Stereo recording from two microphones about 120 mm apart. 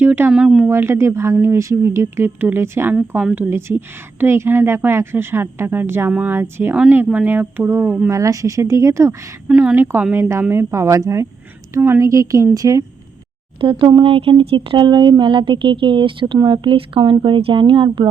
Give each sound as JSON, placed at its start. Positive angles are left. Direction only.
{"t": 0.0, "sound": "speech", "side_deg": -15}
{"t": 0.7, "sound": "speech", "side_deg": -20}
{"t": 9.5, "sound": "speech", "side_deg": -10}
{"t": 13.6, "sound": "speech", "side_deg": -45}